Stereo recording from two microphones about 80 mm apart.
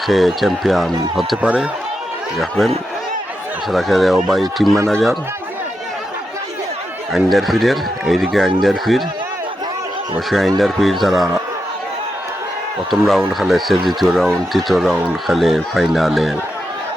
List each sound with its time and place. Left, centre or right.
0.1 s speech: centre
1.4 s a man's voice: centre
2.4 s speech: centre
7.1 s speech: centre
10.2 s speech: centre
12.9 s speech: centre